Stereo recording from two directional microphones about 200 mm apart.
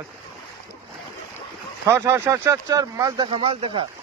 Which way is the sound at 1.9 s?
15° right (ahead or behind).